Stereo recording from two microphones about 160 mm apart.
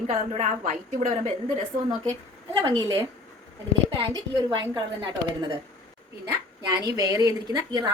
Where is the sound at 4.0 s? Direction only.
30° right (ahead or behind).